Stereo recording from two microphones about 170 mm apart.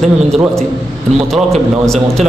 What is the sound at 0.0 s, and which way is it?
Speech, centre (ahead or behind).